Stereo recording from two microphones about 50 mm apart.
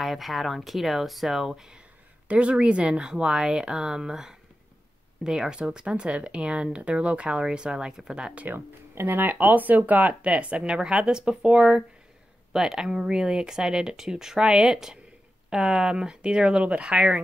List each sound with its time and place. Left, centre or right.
0.0 s speech: centre
2.2 s speech: right
8.5 s speech: right